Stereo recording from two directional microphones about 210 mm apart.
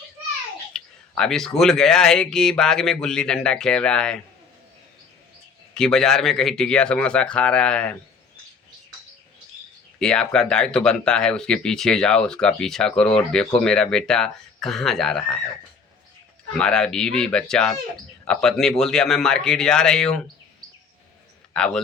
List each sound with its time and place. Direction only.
0.7 s speech: 5° left (ahead or behind)
5.7 s speech: 5° left (ahead or behind)
10.0 s speech: 5° left (ahead or behind)
16.6 s speech: 5° left (ahead or behind)
21.5 s a man's voice: 5° left (ahead or behind)